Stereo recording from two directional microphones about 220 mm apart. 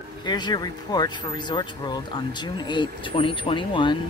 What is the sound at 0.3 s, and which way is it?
Speech, 20° left (ahead or behind).